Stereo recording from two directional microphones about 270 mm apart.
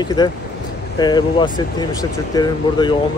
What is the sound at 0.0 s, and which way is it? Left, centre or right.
Speech, centre.